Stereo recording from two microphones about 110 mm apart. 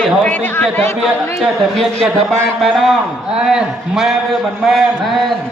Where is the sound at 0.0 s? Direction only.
10° left (ahead or behind).